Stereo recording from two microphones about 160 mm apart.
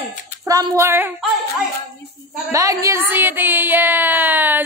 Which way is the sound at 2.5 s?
20° right (ahead or behind).